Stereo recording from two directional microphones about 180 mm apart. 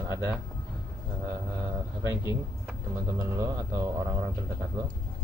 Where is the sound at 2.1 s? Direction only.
15° right (ahead or behind).